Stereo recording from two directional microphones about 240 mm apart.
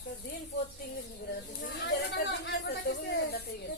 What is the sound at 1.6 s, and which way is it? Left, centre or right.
Speech, left.